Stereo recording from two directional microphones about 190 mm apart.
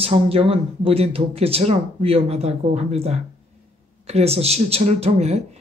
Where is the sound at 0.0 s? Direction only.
30° right (ahead or behind).